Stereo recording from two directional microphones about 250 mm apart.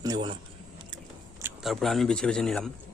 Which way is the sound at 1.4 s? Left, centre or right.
Centre.